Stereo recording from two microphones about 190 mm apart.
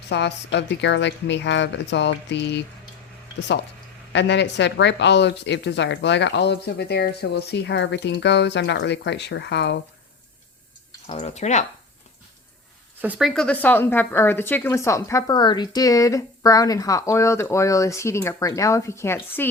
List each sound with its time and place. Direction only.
0.1 s speech: 65° left (ahead or behind)
11.0 s speech: 35° left (ahead or behind)
13.0 s speech: 5° right (ahead or behind); by 19.5 s 15° left (ahead or behind)